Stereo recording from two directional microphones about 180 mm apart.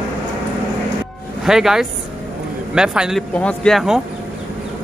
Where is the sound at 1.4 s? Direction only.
Centre (ahead or behind).